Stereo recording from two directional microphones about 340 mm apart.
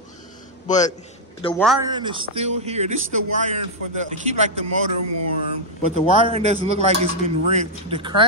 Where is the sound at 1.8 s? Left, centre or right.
Centre.